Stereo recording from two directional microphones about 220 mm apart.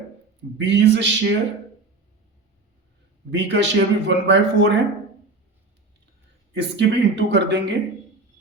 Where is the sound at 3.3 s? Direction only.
55° right (ahead or behind).